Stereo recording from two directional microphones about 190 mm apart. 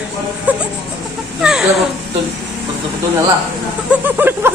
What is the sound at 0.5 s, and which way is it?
Music, 10° right (ahead or behind).